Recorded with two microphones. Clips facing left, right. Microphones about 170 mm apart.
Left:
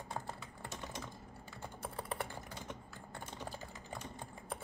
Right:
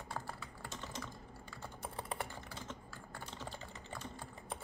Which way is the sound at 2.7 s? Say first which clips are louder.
Left 1 dB; 20° left (ahead or behind).